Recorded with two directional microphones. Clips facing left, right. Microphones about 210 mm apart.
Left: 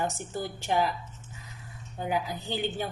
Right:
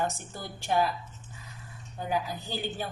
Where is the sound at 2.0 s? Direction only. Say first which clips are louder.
Left 1 dB; 20° left (ahead or behind).